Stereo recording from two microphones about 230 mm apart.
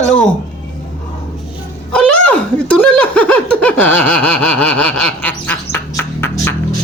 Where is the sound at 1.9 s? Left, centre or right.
Centre.